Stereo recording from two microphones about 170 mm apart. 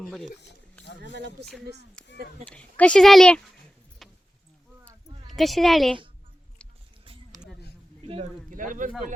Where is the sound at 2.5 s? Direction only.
5° left (ahead or behind).